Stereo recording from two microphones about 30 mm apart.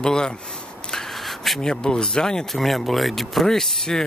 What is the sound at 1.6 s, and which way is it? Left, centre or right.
Speech, left.